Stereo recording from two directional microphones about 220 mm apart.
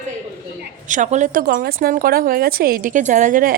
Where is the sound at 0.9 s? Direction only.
35° right (ahead or behind).